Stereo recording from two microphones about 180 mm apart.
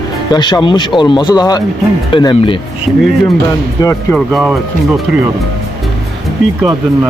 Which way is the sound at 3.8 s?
20° left (ahead or behind).